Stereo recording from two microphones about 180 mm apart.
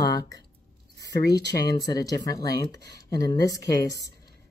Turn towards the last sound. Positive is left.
turn(degrees=20)  # may be behind; listen again after turning